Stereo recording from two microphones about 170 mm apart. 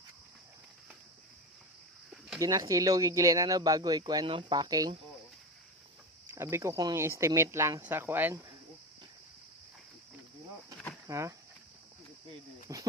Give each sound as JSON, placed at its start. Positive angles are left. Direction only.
{"t": 2.4, "sound": "speech", "side_deg": -20}
{"t": 6.3, "sound": "speech", "side_deg": -15}
{"t": 11.0, "sound": "speech", "side_deg": -20}
{"t": 12.7, "sound": "a sound", "side_deg": -20}